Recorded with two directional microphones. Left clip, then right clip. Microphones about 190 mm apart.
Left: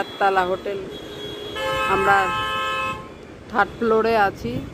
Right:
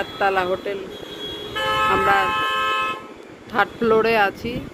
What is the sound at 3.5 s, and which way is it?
Speech, 5° left (ahead or behind).